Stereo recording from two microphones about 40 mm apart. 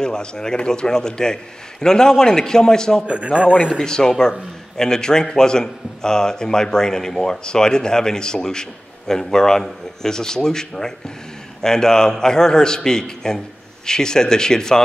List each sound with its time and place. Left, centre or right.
0.0 s a man's voice: centre
3.1 s speech: right
3.5 s a man's voice: left